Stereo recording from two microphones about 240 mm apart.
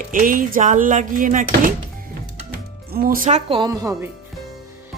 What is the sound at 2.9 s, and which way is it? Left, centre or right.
Speech, right.